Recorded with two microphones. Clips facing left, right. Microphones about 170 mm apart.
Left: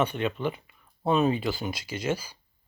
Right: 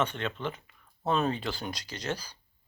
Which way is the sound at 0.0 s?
10° left (ahead or behind).